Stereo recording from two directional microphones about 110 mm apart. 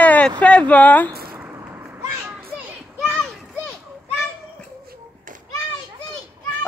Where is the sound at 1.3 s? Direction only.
25° right (ahead or behind).